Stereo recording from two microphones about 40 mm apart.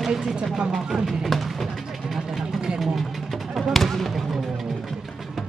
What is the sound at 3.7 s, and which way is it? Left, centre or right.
Basketball bounce, centre.